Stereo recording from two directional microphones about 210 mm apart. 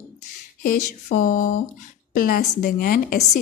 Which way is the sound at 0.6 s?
40° left (ahead or behind).